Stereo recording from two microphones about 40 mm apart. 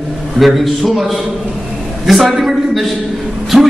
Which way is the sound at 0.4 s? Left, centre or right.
Centre.